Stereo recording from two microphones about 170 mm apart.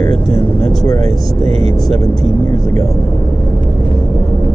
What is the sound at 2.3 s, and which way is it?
Vehicle, 20° left (ahead or behind).